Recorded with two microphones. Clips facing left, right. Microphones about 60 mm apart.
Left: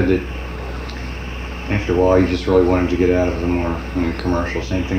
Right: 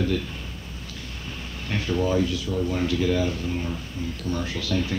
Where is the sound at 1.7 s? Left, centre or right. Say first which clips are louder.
Left 10 dB; left.